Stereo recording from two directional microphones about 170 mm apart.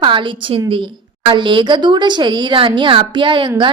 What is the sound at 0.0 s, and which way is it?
Speech, 30° right (ahead or behind).